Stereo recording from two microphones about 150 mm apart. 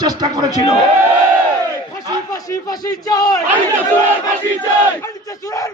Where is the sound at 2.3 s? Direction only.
25° left (ahead or behind).